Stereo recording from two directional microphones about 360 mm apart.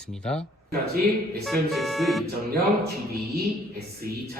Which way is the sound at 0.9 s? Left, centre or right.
Right.